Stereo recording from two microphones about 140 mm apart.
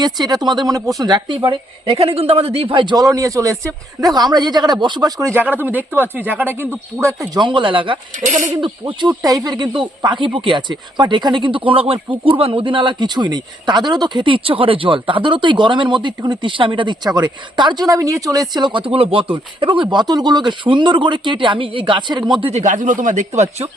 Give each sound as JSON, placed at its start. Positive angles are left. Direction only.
{"t": 0.0, "sound": "speech", "side_deg": -30}
{"t": 5.3, "sound": "speech", "side_deg": -15}
{"t": 7.4, "sound": "speech", "side_deg": -35}
{"t": 8.2, "sound": "speech", "side_deg": -65}
{"t": 8.6, "sound": "speech", "side_deg": -35}
{"t": 22.6, "sound": "speech", "side_deg": -65}